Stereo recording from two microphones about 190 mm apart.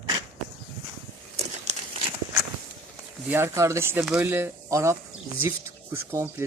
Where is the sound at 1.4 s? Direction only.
35° right (ahead or behind).